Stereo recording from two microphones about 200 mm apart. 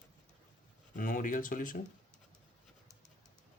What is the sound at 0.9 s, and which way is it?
Speech, 45° left (ahead or behind).